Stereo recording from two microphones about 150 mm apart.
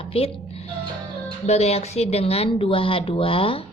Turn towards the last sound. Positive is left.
turn(degrees=40)  # may be behind; listen again after turning